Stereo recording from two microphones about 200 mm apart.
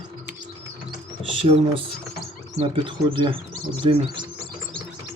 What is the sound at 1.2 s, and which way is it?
Mechanisms, 25° right (ahead or behind).